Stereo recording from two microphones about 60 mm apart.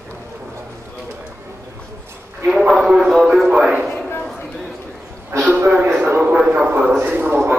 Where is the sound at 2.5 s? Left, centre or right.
Centre.